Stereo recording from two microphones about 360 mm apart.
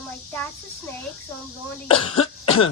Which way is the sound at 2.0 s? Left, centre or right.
Centre.